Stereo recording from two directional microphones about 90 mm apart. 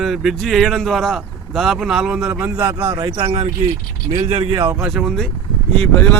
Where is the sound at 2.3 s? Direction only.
20° right (ahead or behind).